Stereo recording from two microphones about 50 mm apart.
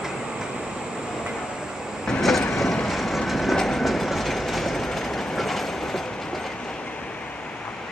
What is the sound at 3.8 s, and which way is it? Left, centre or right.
Train, centre.